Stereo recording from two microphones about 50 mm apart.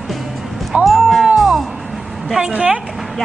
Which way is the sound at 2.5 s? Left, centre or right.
Right.